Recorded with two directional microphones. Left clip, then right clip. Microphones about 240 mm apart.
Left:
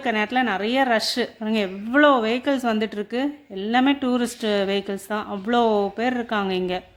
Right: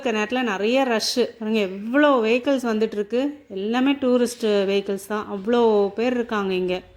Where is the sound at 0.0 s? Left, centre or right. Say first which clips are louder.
Left 1 dB; centre.